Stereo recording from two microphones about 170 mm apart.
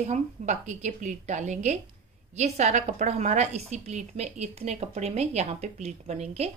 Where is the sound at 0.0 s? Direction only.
45° right (ahead or behind).